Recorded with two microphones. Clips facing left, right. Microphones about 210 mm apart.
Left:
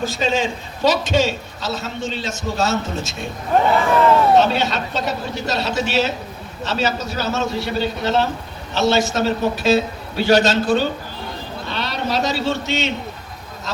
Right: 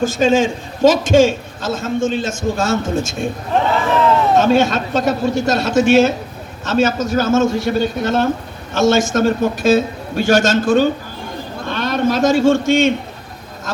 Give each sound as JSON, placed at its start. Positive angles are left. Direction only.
{"t": 0.0, "sound": "a man's voice", "side_deg": -50}
{"t": 4.4, "sound": "a man's voice", "side_deg": -50}
{"t": 11.6, "sound": "a sound", "side_deg": -50}